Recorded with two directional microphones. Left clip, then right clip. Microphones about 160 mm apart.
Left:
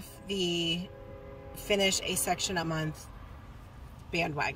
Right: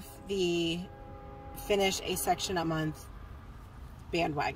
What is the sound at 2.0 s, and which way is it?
Speech, 50° right (ahead or behind).